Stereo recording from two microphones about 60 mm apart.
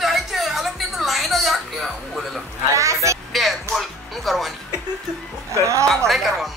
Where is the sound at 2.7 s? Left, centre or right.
Right.